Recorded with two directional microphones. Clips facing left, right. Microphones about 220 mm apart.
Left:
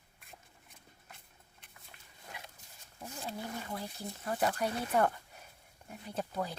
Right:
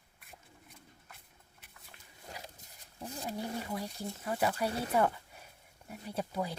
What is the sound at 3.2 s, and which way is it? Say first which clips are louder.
Wild animals: right 3 dB; 15° right (ahead or behind).